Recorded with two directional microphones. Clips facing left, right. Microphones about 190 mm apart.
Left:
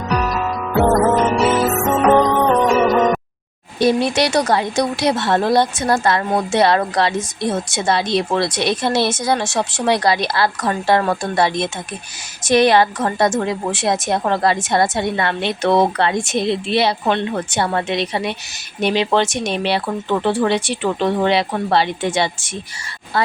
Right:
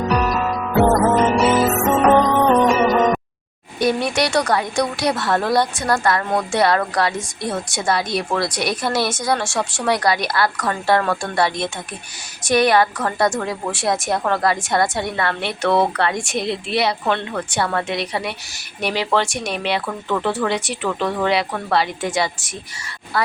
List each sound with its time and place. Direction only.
0.2 s music: centre (ahead or behind)
3.8 s a woman's voice: 25° left (ahead or behind)